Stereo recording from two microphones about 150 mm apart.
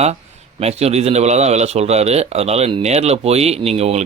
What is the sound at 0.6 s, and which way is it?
Speech, 45° right (ahead or behind).